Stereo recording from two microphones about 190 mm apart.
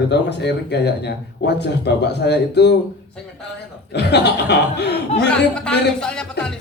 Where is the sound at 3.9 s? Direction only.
60° left (ahead or behind).